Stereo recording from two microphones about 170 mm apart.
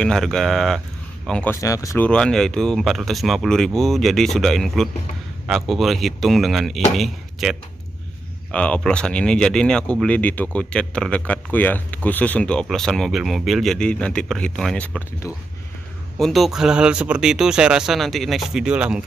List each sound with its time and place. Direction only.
0.0 s speech: 5° left (ahead or behind)
1.6 s speech: 20° left (ahead or behind)
2.0 s speech: 5° left (ahead or behind)
16.2 s speech: centre (ahead or behind)